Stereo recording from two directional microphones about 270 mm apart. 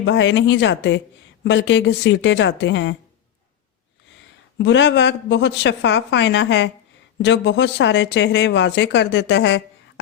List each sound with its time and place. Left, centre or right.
0.0 s speech: left
4.5 s speech: left